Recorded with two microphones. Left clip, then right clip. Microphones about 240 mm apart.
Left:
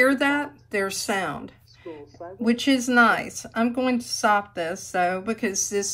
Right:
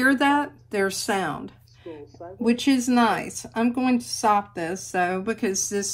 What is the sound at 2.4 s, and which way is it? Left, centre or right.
Speech, left.